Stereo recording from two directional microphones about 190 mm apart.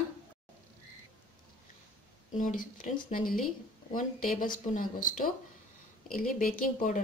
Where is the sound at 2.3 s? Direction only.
45° left (ahead or behind).